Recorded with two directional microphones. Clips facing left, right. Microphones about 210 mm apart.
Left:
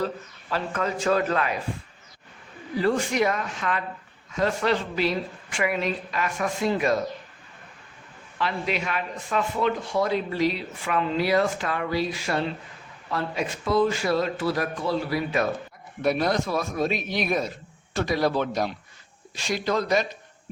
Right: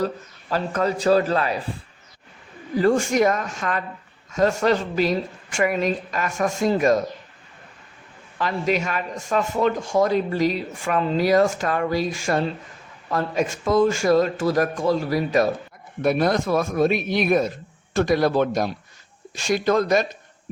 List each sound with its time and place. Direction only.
0.5 s a man's voice: 40° right (ahead or behind)
2.7 s a man's voice: 45° right (ahead or behind)
8.4 s a man's voice: 45° right (ahead or behind)